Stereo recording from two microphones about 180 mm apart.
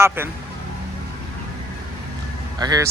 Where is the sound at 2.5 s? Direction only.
20° right (ahead or behind).